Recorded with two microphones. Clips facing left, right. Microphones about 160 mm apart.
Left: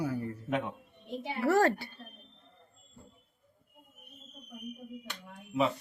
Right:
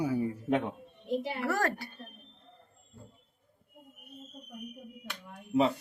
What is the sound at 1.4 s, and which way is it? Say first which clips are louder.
Speech: left 5 dB; 25° left (ahead or behind).